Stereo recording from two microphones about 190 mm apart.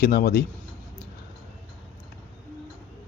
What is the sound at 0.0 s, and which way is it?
Speech, 55° left (ahead or behind).